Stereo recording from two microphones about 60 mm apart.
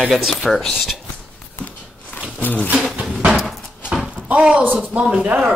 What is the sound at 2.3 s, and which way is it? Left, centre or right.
Speech, left.